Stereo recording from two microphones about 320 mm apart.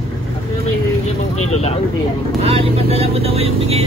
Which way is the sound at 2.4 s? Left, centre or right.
Centre.